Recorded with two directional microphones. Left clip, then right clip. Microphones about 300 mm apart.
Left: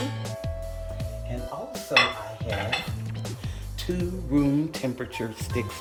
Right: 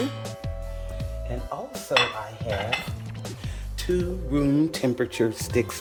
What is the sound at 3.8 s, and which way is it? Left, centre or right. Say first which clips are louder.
Speech: right 5 dB; centre.